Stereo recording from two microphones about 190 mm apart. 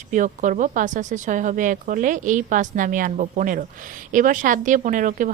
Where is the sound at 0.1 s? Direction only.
40° right (ahead or behind).